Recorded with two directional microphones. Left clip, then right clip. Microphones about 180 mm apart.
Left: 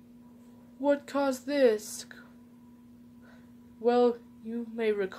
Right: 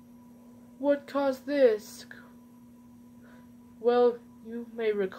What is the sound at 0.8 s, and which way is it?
A woman's voice, 40° left (ahead or behind).